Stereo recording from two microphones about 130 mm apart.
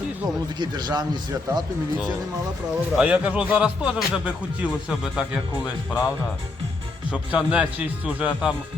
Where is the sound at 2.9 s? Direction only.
5° right (ahead or behind).